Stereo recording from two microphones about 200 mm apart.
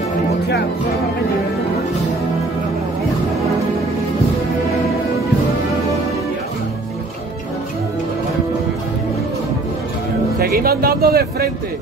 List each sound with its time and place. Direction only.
10.4 s speech: 50° right (ahead or behind)